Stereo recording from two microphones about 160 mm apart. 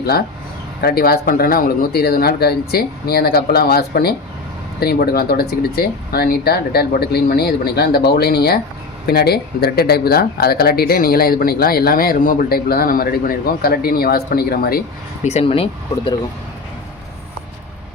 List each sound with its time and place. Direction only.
0.8 s speech: 75° left (ahead or behind)
15.2 s speech: 40° left (ahead or behind)